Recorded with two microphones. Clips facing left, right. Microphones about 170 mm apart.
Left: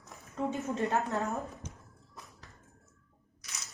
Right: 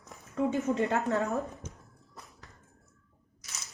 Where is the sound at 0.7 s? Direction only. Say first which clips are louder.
Right 3 dB; 70° right (ahead or behind).